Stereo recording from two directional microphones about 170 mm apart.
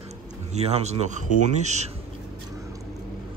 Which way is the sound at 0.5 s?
40° right (ahead or behind).